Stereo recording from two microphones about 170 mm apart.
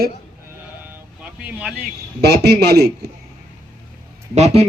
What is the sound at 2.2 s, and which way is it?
Speech, 75° right (ahead or behind).